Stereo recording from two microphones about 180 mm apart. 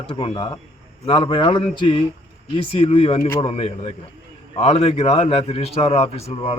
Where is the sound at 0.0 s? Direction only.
25° left (ahead or behind).